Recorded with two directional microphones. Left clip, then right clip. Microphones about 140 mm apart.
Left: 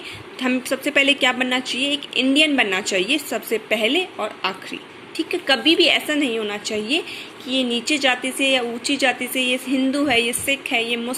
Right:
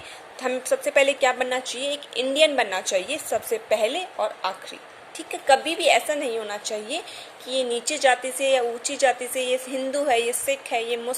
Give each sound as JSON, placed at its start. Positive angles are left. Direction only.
{"t": 0.9, "sound": "a woman's voice", "side_deg": -15}
{"t": 2.9, "sound": "a woman's voice", "side_deg": -10}
{"t": 3.8, "sound": "a woman's voice", "side_deg": -25}
{"t": 4.4, "sound": "a woman's voice", "side_deg": -15}